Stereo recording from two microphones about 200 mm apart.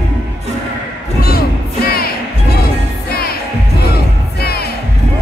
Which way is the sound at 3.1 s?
50° left (ahead or behind).